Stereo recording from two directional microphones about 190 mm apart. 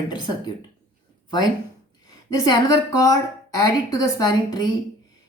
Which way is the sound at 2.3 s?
20° left (ahead or behind).